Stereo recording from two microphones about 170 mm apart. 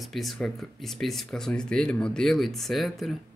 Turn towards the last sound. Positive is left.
turn(degrees=0)  # may be behind; listen again after turning